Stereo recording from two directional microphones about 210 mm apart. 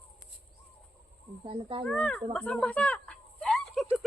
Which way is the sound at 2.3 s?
5° left (ahead or behind).